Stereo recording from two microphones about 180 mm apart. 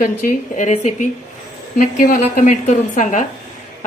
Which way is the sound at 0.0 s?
50° left (ahead or behind).